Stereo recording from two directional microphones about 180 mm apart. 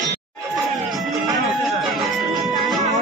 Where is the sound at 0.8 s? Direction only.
Centre (ahead or behind).